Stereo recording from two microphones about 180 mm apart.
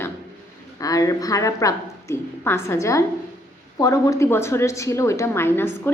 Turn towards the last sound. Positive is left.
turn(degrees=15)  # may be behind; listen again after turning